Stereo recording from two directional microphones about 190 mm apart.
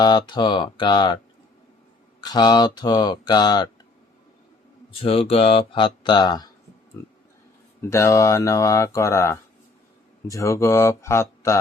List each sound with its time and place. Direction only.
0.0 s speech: 25° left (ahead or behind)
2.2 s speech: 20° left (ahead or behind)
4.9 s speech: 30° left (ahead or behind); by 11.6 s 15° left (ahead or behind)